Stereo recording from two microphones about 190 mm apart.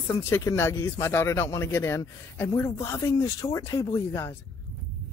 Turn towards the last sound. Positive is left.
turn(degrees=15)  # may be behind; listen again after turning